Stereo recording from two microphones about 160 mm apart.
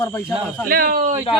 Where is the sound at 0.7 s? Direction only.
65° right (ahead or behind).